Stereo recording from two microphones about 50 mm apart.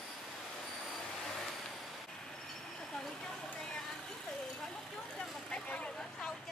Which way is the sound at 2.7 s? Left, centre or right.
Centre.